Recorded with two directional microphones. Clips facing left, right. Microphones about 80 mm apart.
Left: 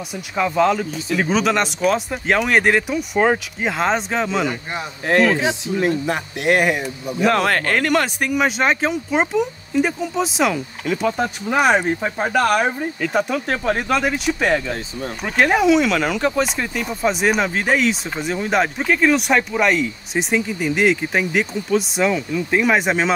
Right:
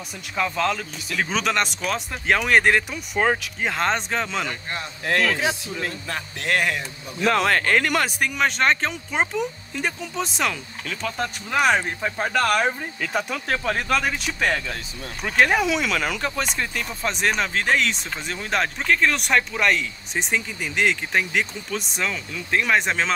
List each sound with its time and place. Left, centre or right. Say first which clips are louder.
0.4 s speech: left 6 dB; centre
5.0 s speech: left 6 dB; left
7.4 s speech: left 1 dB; left
7.9 s speech: left 5 dB; centre